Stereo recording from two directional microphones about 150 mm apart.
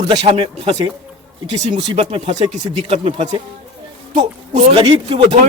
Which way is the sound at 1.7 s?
35° right (ahead or behind).